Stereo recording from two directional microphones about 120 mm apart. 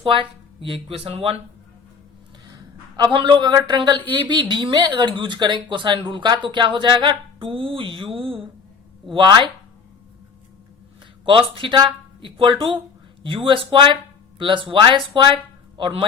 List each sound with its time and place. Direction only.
0.0 s speech: 50° right (ahead or behind)
2.9 s a woman's voice: 40° right (ahead or behind)
11.3 s speech: 45° right (ahead or behind)